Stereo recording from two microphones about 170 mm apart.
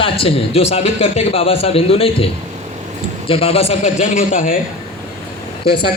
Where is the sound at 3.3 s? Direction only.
35° left (ahead or behind); by 4.5 s 50° left (ahead or behind).